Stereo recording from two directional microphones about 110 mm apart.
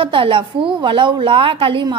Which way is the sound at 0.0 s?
50° right (ahead or behind).